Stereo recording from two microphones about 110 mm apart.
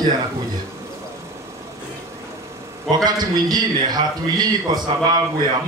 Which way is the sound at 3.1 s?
40° right (ahead or behind).